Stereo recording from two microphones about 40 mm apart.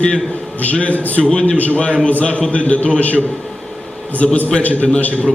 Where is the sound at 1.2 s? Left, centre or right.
Left.